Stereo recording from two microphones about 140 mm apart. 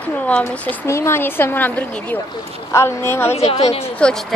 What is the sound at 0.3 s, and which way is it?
A woman's voice, 15° left (ahead or behind).